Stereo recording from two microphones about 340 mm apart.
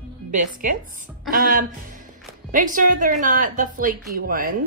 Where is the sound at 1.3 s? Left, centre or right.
Right.